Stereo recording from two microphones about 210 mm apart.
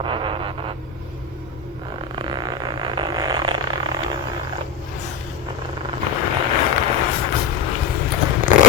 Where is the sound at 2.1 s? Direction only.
20° right (ahead or behind).